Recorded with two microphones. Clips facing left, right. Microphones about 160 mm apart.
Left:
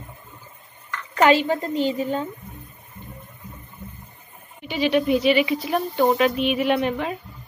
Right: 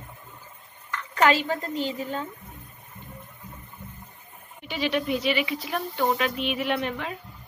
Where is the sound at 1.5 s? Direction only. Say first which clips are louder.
Left 6 dB; 20° left (ahead or behind).